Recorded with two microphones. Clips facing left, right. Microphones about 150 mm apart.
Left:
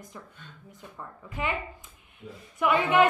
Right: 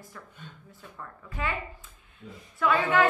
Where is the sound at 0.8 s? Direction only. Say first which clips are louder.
Left 2 dB; 20° left (ahead or behind).